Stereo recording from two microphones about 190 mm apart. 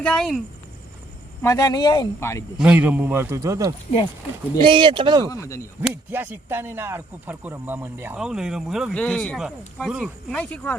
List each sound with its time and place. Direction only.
0.0 s speech: 5° left (ahead or behind)
1.4 s speech: 15° left (ahead or behind)
2.6 s a man's voice: 5° right (ahead or behind); by 5.2 s 25° right (ahead or behind)
5.2 s speech: 15° left (ahead or behind)
5.8 s speech: 10° right (ahead or behind); by 10.8 s 10° left (ahead or behind)